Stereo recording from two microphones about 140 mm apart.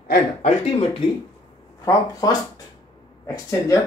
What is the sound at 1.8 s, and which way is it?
Speech, 25° left (ahead or behind).